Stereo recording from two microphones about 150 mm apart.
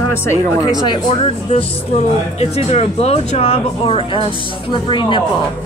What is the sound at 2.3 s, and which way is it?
Speech, 45° left (ahead or behind).